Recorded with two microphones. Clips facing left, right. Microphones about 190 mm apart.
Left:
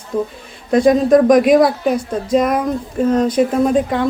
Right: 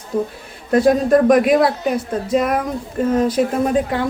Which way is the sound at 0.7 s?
5° right (ahead or behind).